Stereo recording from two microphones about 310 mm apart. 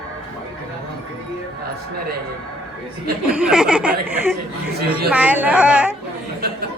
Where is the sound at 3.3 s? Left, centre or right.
Centre.